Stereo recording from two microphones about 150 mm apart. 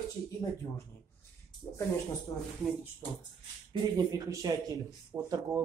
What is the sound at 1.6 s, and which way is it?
Speech, 10° left (ahead or behind).